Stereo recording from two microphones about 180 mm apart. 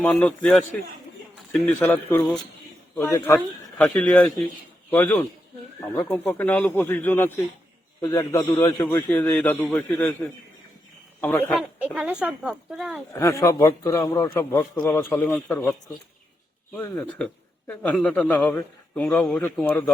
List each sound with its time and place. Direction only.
0.0 s a man's voice: 5° left (ahead or behind)
1.6 s a man's voice: 10° left (ahead or behind)
11.9 s speech: 5° right (ahead or behind)
13.1 s a man's voice: 15° left (ahead or behind)